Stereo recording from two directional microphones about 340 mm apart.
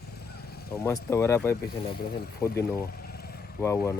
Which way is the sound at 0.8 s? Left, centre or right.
Centre.